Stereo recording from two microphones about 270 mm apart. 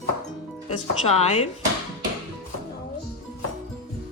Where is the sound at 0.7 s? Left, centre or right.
Left.